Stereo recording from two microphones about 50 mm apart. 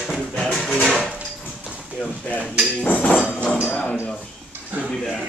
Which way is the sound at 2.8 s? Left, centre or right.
Left.